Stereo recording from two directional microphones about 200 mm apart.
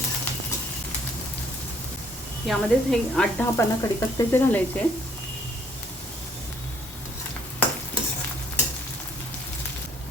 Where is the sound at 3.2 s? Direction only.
10° left (ahead or behind).